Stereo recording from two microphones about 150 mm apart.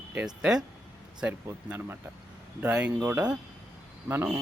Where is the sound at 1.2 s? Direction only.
15° right (ahead or behind).